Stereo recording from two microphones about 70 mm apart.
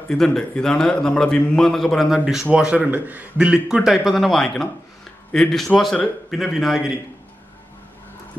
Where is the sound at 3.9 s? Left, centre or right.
Centre.